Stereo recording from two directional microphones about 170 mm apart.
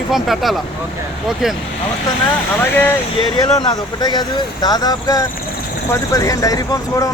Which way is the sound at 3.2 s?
25° left (ahead or behind).